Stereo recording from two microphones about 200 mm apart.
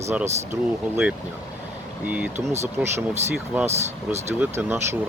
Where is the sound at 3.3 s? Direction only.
5° right (ahead or behind).